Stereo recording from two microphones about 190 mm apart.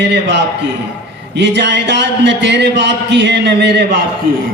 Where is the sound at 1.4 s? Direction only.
65° right (ahead or behind).